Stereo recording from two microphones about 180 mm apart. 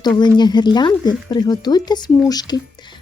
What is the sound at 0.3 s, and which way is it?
Speech, 25° left (ahead or behind).